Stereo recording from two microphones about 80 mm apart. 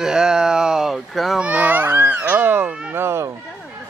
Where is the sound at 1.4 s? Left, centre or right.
Centre; by 3.3 s right.